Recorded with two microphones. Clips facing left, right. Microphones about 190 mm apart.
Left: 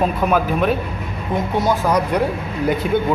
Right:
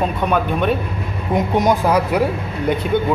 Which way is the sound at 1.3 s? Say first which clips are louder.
Right 3 dB; 15° right (ahead or behind).